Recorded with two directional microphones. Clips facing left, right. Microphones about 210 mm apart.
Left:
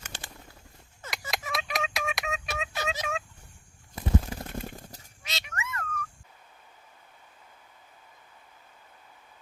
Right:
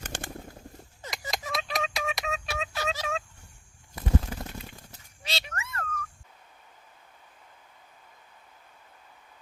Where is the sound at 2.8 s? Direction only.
20° left (ahead or behind).